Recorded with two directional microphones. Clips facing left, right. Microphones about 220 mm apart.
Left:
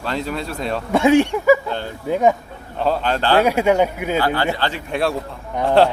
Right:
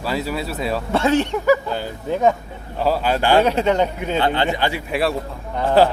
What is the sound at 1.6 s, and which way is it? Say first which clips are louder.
Speech: even; 5° right (ahead or behind).